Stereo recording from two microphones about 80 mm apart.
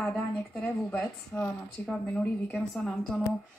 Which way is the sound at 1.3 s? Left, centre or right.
Centre.